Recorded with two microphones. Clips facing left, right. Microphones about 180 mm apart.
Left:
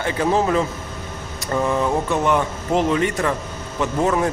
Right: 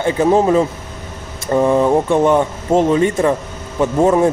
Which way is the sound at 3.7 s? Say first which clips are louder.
Right 7 dB; 25° right (ahead or behind).